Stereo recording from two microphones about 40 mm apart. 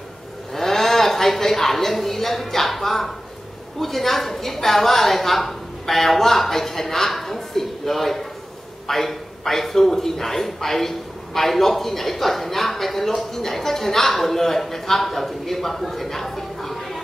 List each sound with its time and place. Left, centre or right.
0.6 s a woman's voice: centre